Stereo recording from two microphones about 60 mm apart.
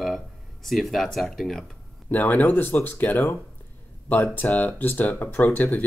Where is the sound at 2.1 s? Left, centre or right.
Left.